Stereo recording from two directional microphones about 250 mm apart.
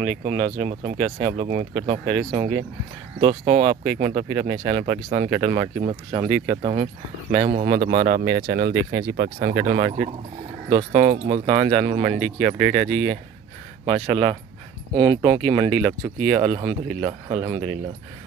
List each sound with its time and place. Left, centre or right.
0.1 s speech: right
3.2 s speech: right
3.8 s speech: right
4.1 s speech: right